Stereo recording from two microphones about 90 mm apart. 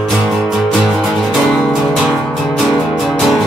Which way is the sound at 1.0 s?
Centre (ahead or behind).